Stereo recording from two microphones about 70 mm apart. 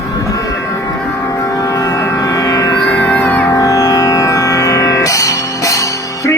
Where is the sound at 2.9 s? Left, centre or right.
Left.